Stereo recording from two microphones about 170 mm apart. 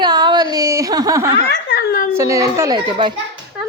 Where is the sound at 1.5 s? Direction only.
70° left (ahead or behind).